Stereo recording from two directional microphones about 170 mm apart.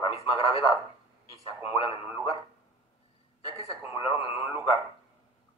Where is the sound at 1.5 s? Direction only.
15° right (ahead or behind).